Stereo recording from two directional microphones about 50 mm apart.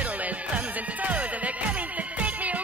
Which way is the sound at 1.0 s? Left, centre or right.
Right.